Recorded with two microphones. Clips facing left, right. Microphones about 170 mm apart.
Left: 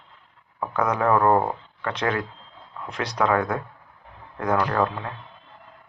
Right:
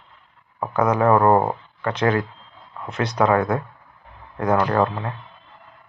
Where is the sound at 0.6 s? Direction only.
30° right (ahead or behind).